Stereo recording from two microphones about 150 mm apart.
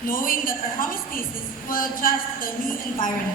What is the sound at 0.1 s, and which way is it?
A woman's voice, 70° left (ahead or behind).